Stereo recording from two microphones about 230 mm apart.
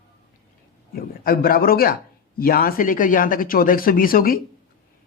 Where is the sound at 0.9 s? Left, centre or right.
Left.